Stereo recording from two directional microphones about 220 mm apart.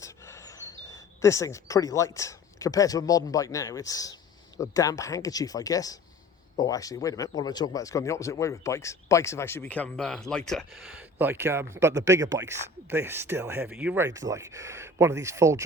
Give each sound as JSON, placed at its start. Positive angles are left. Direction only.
{"t": 0.9, "sound": "speech", "side_deg": 15}